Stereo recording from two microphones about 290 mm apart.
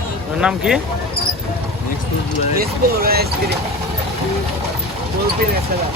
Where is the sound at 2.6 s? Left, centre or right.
Right.